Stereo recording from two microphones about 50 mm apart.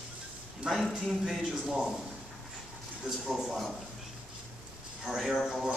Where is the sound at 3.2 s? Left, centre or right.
Centre.